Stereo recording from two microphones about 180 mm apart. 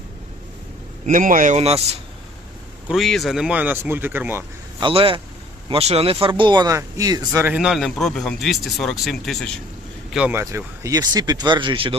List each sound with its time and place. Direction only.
1.0 s speech: 50° right (ahead or behind)
2.8 s speech: centre (ahead or behind)
4.8 s speech: 30° right (ahead or behind)
7.5 s speech: 5° right (ahead or behind); by 11.9 s 30° right (ahead or behind)